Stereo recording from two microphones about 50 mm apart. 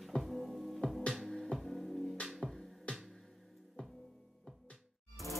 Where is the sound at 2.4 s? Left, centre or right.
Centre.